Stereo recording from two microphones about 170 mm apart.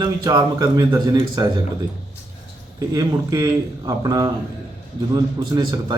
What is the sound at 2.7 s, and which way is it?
A man's voice, 20° right (ahead or behind).